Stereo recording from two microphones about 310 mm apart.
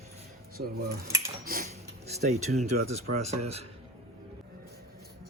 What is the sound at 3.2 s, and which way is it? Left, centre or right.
Speech, right.